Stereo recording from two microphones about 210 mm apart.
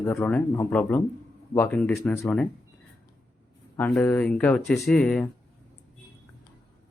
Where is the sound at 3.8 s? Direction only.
10° left (ahead or behind).